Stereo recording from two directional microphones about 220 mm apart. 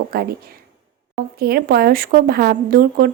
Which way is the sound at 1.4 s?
45° right (ahead or behind).